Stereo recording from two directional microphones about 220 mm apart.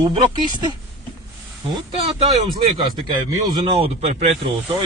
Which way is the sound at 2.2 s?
20° right (ahead or behind).